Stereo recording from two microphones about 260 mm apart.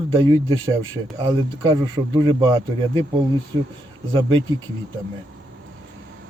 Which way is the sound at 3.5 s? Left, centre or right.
Centre.